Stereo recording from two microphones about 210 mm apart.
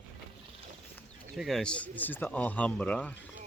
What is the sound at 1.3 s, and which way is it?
Speech, centre (ahead or behind).